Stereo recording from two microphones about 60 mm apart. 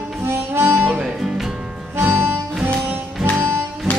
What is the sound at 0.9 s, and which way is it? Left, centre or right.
Music, centre.